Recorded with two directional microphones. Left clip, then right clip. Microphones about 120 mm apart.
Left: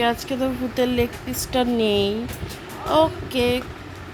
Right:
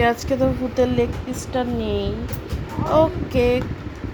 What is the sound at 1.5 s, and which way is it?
Speech, 30° left (ahead or behind).